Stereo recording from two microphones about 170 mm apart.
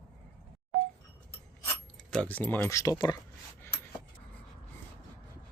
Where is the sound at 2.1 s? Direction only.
5° left (ahead or behind).